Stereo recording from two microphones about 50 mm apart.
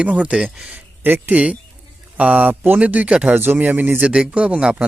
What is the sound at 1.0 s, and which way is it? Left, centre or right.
Speech, right.